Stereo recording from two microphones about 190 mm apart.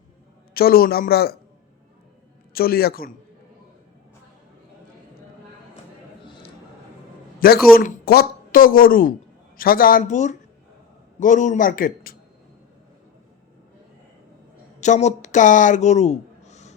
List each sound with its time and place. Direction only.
0.5 s speech: 50° left (ahead or behind)
2.5 s a man's voice: 50° left (ahead or behind)
6.2 s a sound: 25° left (ahead or behind)
7.3 s speech: 50° left (ahead or behind)
14.8 s speech: 40° left (ahead or behind)